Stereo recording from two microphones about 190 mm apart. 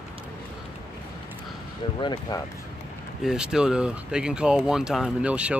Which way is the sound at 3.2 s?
5° right (ahead or behind).